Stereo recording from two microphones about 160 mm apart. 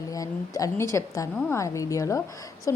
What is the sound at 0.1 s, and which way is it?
A woman's voice, 20° left (ahead or behind).